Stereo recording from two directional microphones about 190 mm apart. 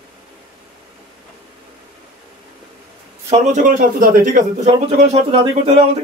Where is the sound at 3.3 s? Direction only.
40° right (ahead or behind).